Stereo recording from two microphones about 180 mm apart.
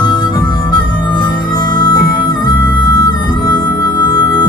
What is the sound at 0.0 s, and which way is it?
Harmonica, 25° left (ahead or behind).